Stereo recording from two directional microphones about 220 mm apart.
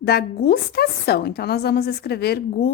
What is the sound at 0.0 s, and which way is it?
A woman's voice, 45° left (ahead or behind).